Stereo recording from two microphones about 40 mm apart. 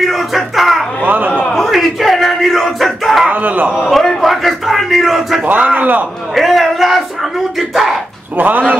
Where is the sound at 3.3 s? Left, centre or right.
Right.